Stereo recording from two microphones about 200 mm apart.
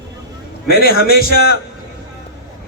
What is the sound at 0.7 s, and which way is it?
Speech, 50° left (ahead or behind).